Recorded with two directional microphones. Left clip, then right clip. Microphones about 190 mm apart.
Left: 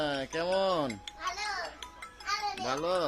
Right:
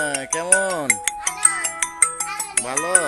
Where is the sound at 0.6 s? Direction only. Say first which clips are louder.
Right 6 dB; 25° right (ahead or behind).